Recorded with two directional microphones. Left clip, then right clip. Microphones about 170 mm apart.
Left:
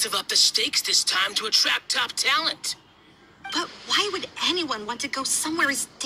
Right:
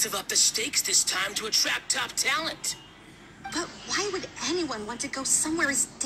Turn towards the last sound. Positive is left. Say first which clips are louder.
# left 2 dB
turn(degrees=30)  # may be behind; listen again after turning